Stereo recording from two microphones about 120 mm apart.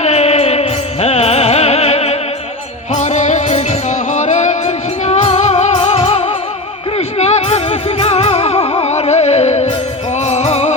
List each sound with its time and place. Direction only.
0.0 s music: 60° left (ahead or behind)
2.9 s music: 70° left (ahead or behind)